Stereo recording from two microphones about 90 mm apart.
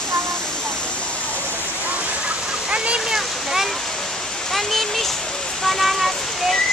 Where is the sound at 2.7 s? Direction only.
10° right (ahead or behind).